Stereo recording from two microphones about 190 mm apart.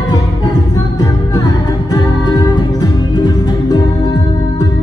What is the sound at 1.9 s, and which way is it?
Music, 20° left (ahead or behind).